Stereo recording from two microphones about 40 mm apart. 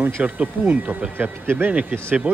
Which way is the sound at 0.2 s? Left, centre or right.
Right.